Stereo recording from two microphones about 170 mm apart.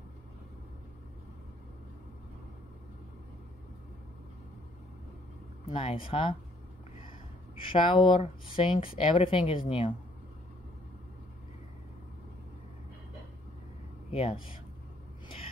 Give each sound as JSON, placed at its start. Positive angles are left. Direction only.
{"t": 5.7, "sound": "speech", "side_deg": 30}
{"t": 7.6, "sound": "speech", "side_deg": 30}
{"t": 14.1, "sound": "speech", "side_deg": 35}